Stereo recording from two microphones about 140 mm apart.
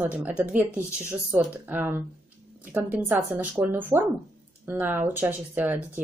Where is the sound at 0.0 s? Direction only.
10° right (ahead or behind).